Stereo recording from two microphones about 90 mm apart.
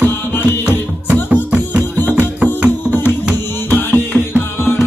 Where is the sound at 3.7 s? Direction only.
20° left (ahead or behind).